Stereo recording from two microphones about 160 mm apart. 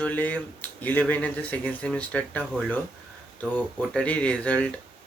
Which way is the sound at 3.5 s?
10° left (ahead or behind).